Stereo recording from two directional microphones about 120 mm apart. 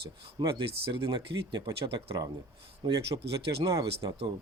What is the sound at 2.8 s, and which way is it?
Speech, 40° right (ahead or behind).